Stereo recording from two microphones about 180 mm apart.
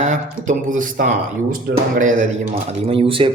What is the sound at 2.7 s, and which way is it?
Speech, 30° right (ahead or behind).